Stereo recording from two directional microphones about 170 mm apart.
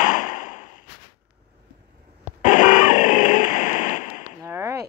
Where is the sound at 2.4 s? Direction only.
50° left (ahead or behind).